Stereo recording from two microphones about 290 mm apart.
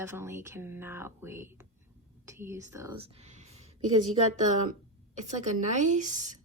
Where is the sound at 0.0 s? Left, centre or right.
Centre.